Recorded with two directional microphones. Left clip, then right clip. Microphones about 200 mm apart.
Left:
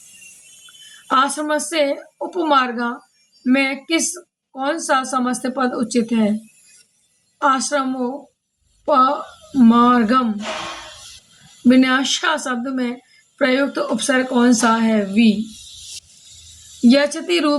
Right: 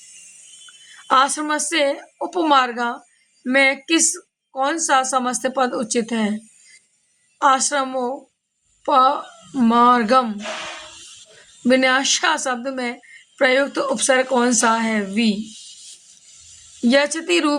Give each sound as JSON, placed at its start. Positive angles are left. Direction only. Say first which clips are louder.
{"t": 1.0, "sound": "a woman's voice", "louder": "right 1 dB", "side_deg": -50}
{"t": 7.4, "sound": "a woman's voice", "louder": "right 1 dB", "side_deg": -45}
{"t": 11.7, "sound": "a woman's voice", "louder": "even", "side_deg": -50}
{"t": 16.9, "sound": "a woman's voice", "louder": "even", "side_deg": -45}